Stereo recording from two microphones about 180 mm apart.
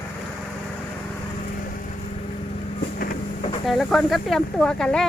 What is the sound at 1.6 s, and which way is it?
Vehicle, 50° left (ahead or behind).